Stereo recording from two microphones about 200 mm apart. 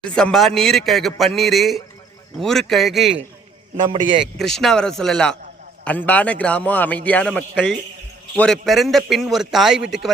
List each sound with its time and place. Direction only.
0.0 s a man's voice: 5° left (ahead or behind)
3.8 s a man's voice: 25° right (ahead or behind)
4.4 s a man's voice: centre (ahead or behind)